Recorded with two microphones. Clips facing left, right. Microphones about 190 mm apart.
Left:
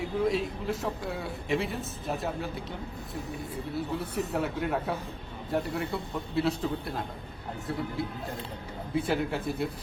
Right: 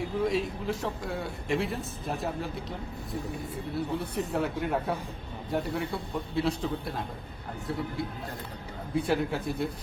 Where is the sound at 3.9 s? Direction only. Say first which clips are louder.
Even; centre (ahead or behind).